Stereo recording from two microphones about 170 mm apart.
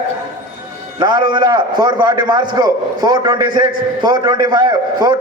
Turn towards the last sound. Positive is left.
turn(degrees=-25)  # may be behind; listen again after turning